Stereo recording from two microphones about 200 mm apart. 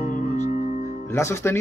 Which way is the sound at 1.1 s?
15° left (ahead or behind).